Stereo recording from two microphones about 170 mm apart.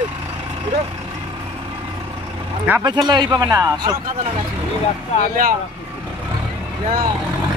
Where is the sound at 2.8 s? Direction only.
25° right (ahead or behind).